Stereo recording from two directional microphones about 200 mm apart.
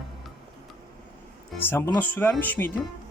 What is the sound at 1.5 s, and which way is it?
Speech, 10° left (ahead or behind).